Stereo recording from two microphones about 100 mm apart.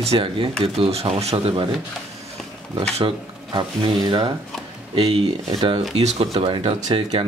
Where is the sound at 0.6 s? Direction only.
85° right.